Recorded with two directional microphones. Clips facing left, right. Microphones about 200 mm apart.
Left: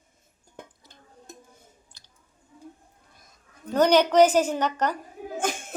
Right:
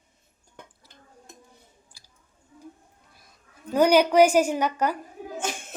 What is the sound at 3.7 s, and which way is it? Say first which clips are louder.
A woman's voice: right 1 dB; 10° right (ahead or behind).